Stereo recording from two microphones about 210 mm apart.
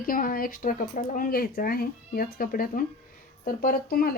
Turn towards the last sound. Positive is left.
turn(degrees=45)  # may be behind; listen again after turning